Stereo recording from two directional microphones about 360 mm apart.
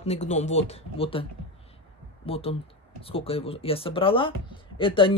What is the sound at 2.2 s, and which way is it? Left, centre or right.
Speech, centre.